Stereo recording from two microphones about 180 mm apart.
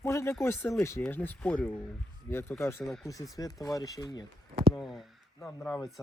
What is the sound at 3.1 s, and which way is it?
Speech, 20° left (ahead or behind).